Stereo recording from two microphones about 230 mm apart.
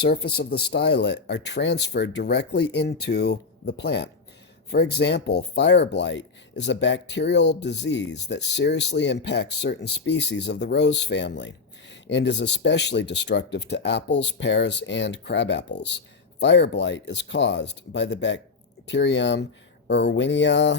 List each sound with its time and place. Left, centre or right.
0.0 s speech: left